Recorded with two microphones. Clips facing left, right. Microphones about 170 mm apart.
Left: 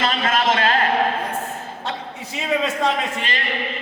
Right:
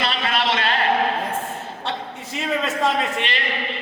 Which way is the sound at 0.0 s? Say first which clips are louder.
Left 3 dB; 45° left (ahead or behind).